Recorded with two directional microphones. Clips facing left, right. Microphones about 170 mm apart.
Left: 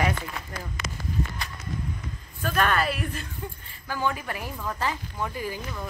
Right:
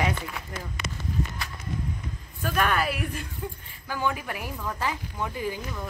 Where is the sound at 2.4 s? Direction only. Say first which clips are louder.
Left 1 dB; 10° right (ahead or behind).